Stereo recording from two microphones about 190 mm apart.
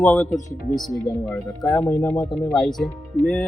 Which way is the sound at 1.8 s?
15° left (ahead or behind).